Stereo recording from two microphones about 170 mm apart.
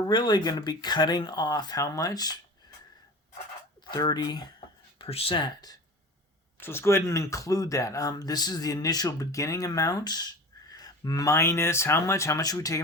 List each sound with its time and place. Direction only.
0.1 s speech: 25° left (ahead or behind)
3.8 s speech: 25° left (ahead or behind)
4.9 s speech: 35° left (ahead or behind)
6.6 s speech: 15° left (ahead or behind)